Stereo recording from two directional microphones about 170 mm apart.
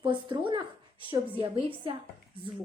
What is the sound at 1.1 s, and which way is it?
Speech, 30° right (ahead or behind).